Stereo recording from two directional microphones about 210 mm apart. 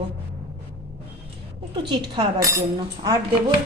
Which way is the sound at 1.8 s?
20° right (ahead or behind).